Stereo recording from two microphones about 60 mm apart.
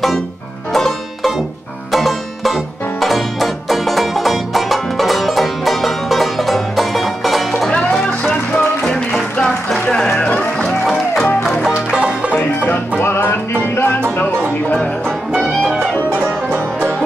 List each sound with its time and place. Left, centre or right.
0.7 s music: centre
7.7 s music: centre
11.7 s music: centre
15.6 s music: centre
16.2 s music: right